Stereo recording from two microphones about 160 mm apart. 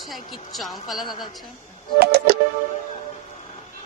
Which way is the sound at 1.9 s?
80° right.